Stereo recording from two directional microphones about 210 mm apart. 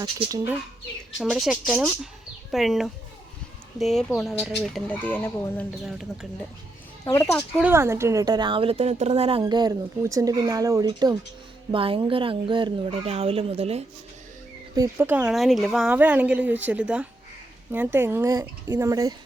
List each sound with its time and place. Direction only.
0.0 s speech: 20° right (ahead or behind)
1.2 s speech: 5° right (ahead or behind)
5.8 s speech: centre (ahead or behind)
7.0 s speech: 15° left (ahead or behind)
7.6 s speech: 10° right (ahead or behind); by 9.4 s 30° right (ahead or behind)
9.4 s speech: 20° right (ahead or behind)
14.8 s speech: 10° right (ahead or behind)